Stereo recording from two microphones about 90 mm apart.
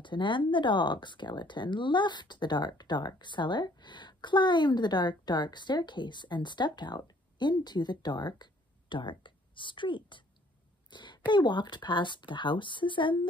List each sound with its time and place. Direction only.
0.0 s speech: 60° left (ahead or behind)